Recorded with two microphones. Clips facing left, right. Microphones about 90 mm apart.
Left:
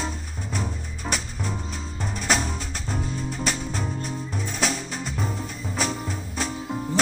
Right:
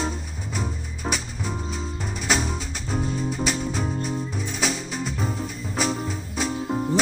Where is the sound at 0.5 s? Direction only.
5° right (ahead or behind).